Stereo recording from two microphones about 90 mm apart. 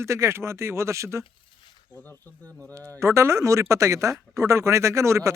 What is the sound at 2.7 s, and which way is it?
Speech, 35° right (ahead or behind).